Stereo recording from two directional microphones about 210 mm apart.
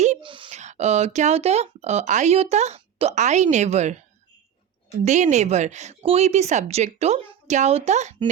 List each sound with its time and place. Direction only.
0.0 s speech: 30° right (ahead or behind)
5.0 s speech: 35° right (ahead or behind)